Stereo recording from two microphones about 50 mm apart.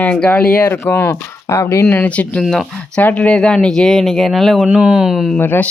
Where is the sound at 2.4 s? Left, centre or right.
Centre.